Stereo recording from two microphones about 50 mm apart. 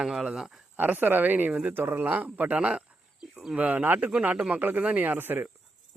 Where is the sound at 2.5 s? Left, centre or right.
Right.